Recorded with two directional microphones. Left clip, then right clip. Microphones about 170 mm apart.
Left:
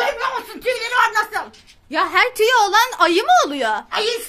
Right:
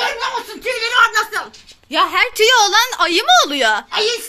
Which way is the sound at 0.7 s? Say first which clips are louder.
Right 4 dB; 90° left.